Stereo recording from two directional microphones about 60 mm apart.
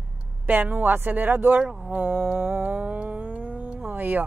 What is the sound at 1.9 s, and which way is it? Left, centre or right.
Speech, right.